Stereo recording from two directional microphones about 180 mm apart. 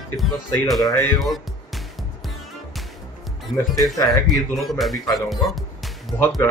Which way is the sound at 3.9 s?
20° left (ahead or behind).